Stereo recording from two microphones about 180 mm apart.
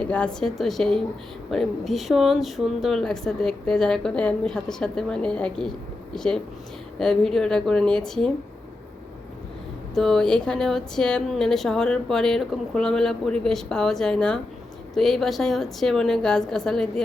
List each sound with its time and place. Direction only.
0.0 s a woman's voice: 5° left (ahead or behind)
9.9 s a woman's voice: centre (ahead or behind)